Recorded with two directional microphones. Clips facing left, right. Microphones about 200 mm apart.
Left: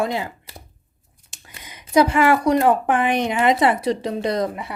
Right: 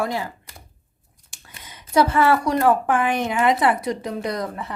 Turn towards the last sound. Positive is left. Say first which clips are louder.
# left 4 dB
turn(degrees=15)  # may be behind; listen again after turning